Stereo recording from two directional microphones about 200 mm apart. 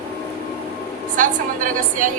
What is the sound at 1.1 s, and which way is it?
Speech, 40° right (ahead or behind).